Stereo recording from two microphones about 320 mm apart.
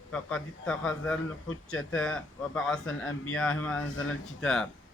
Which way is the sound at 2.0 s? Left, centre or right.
Centre.